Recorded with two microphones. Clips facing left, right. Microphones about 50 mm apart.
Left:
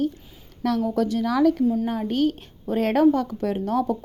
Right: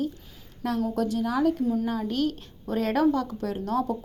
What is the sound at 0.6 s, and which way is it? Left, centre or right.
Speech, left.